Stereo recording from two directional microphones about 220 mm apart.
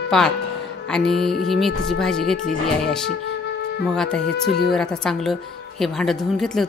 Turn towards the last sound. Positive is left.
turn(degrees=0)  # may be behind; listen again after turning